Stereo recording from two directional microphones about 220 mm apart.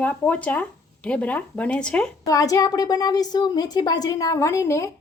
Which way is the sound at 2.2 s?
15° left (ahead or behind).